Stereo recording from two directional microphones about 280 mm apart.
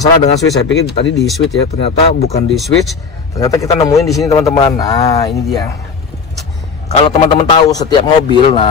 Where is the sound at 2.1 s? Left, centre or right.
Left.